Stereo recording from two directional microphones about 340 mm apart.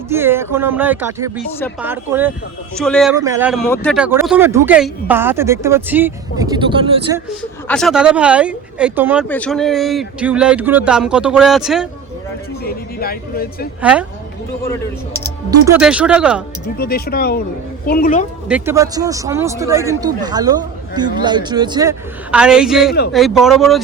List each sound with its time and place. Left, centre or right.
0.1 s speech: centre
7.7 s speech: centre
12.6 s speech: left
15.4 s speech: centre
16.7 s speech: left
18.4 s speech: centre